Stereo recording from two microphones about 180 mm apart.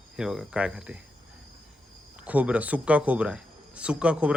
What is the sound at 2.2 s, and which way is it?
Speech, 10° right (ahead or behind).